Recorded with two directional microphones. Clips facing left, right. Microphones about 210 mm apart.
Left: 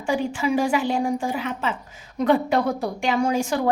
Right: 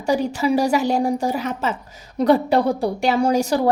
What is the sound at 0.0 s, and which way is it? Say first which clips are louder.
A woman's voice: right 4 dB; 40° right (ahead or behind).